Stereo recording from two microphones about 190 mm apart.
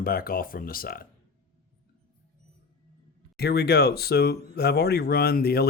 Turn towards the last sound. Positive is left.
turn(degrees=55)  # may be behind; listen again after turning